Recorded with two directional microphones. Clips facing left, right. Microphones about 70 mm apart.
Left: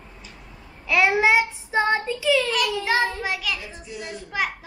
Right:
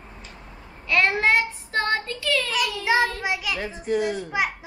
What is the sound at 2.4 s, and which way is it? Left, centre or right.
A man's voice, centre.